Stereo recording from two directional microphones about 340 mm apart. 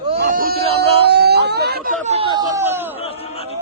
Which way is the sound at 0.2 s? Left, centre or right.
Right.